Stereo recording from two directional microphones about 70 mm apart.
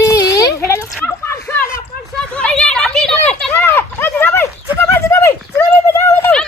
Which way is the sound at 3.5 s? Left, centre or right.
Left.